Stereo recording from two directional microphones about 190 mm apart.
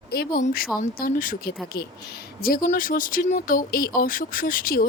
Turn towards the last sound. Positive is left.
turn(degrees=50)  # may be behind; listen again after turning